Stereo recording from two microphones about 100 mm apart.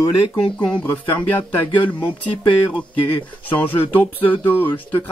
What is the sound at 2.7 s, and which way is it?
Speech, 15° left (ahead or behind).